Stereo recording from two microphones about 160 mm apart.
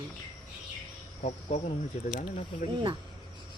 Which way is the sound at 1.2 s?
45° left (ahead or behind).